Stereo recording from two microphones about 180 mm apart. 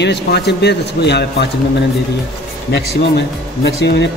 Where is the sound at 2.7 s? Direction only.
70° left (ahead or behind).